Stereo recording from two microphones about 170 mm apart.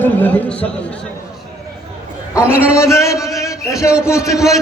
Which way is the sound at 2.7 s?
15° left (ahead or behind).